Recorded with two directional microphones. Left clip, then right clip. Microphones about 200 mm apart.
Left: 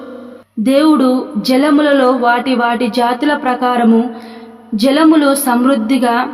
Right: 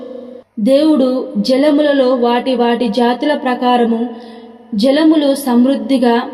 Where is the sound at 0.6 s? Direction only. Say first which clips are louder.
Even; 25° left (ahead or behind).